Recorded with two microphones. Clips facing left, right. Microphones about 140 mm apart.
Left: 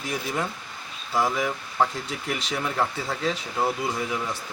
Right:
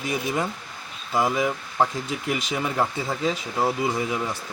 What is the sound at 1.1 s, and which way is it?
Speech, 15° right (ahead or behind).